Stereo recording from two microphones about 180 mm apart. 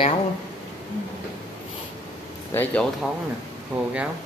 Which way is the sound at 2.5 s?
10° left (ahead or behind).